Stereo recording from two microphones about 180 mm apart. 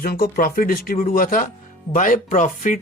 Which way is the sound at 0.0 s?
55° left (ahead or behind).